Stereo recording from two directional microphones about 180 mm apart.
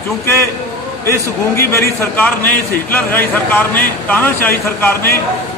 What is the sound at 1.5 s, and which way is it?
A man's voice, 15° left (ahead or behind).